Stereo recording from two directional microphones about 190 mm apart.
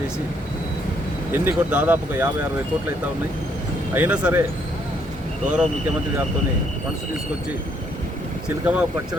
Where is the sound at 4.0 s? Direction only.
5° right (ahead or behind).